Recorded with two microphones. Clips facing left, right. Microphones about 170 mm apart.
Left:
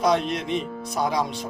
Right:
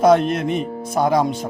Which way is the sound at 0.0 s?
50° right (ahead or behind).